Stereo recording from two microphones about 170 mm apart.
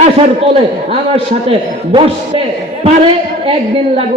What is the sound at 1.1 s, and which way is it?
A man's voice, 35° right (ahead or behind).